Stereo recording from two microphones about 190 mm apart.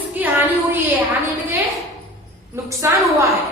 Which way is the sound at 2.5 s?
15° right (ahead or behind).